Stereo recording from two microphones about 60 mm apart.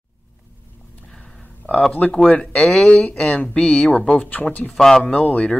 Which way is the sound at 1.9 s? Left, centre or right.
Left.